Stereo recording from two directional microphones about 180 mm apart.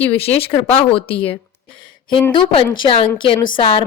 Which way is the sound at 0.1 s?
35° left (ahead or behind).